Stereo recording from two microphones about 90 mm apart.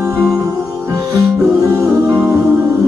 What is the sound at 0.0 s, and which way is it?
Music, 35° right (ahead or behind).